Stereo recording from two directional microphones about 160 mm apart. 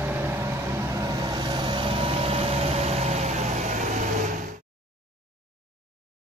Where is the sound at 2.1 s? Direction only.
35° right (ahead or behind).